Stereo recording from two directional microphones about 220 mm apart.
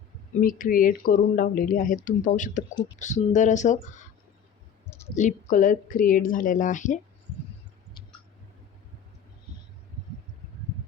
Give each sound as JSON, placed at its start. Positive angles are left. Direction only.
{"t": 0.3, "sound": "speech", "side_deg": 40}
{"t": 5.1, "sound": "speech", "side_deg": 35}